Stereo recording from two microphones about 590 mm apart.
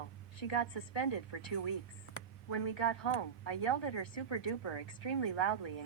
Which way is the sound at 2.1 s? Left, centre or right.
Left.